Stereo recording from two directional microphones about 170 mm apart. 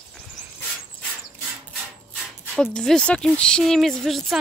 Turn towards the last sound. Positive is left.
turn(degrees=0)  # may be behind; listen again after turning